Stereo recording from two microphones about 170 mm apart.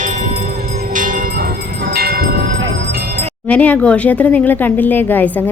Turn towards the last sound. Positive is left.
turn(degrees=10)  # may be behind; listen again after turning